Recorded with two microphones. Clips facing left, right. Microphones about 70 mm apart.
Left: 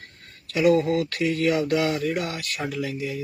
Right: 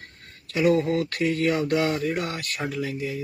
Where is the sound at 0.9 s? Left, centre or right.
Right.